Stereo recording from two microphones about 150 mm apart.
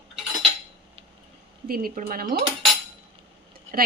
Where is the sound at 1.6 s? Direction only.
80° right.